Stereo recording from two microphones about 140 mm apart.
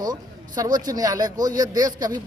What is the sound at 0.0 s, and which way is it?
A man's voice, 25° right (ahead or behind).